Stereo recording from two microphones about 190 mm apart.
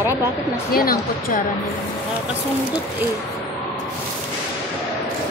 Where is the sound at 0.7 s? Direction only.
50° left (ahead or behind).